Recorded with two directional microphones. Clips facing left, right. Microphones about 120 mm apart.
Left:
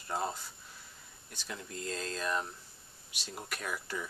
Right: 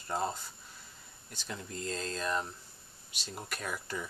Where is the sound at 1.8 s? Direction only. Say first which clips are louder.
Right 1 dB; 5° left (ahead or behind).